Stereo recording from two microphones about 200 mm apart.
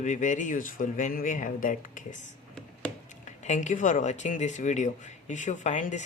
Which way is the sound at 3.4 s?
35° left (ahead or behind).